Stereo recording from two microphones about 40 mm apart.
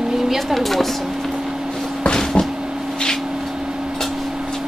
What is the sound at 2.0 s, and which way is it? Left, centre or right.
Vehicle, left.